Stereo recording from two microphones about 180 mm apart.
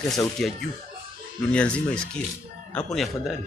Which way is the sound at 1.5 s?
5° left (ahead or behind).